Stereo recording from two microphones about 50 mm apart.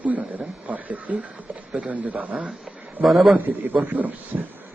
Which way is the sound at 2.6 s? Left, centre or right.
Centre.